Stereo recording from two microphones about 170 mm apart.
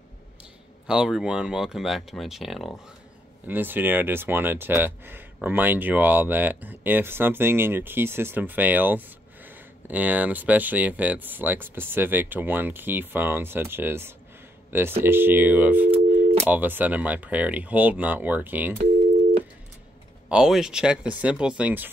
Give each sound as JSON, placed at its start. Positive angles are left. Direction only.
{"t": 0.8, "sound": "speech", "side_deg": -5}
{"t": 20.2, "sound": "speech", "side_deg": -5}